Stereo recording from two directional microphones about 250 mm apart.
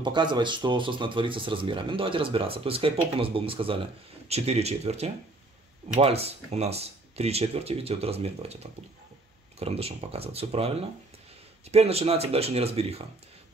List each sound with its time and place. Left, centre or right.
0.0 s speech: centre